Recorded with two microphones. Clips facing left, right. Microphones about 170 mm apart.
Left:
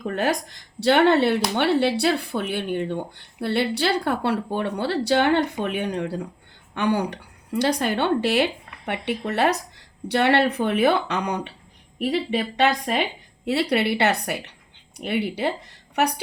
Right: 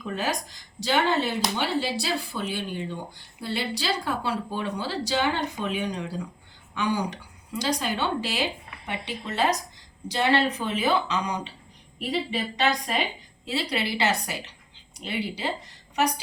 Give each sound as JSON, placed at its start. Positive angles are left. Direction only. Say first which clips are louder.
{"t": 0.0, "sound": "speech", "louder": "left 5 dB", "side_deg": 55}